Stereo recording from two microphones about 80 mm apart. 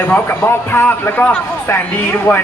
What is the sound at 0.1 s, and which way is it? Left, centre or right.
Speech, left.